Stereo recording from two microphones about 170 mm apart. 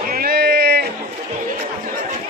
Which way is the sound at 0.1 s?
65° right (ahead or behind).